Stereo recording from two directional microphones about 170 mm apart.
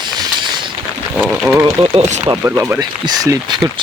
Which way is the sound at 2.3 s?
15° right (ahead or behind).